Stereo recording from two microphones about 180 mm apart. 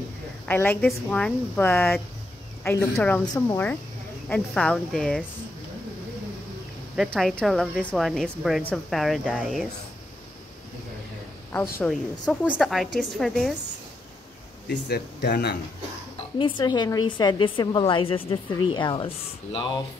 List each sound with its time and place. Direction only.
0.5 s a woman's voice: 10° left (ahead or behind)
7.1 s a woman's voice: 5° left (ahead or behind)
11.5 s speech: 10° left (ahead or behind)
11.9 s a woman's voice: 5° right (ahead or behind)
14.7 s speech: 65° left (ahead or behind)
16.3 s a woman's voice: 25° left (ahead or behind)